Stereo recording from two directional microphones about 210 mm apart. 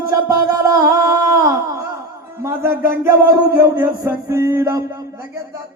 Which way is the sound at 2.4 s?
10° right (ahead or behind).